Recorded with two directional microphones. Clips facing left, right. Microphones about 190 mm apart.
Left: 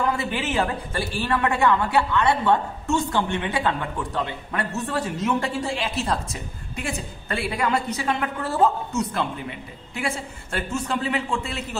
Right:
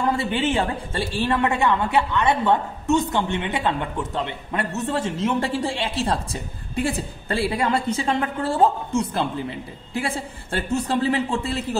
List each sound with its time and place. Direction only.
0.0 s speech: 30° right (ahead or behind)